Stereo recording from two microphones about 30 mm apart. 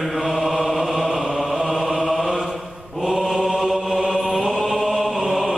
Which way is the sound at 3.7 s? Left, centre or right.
Right.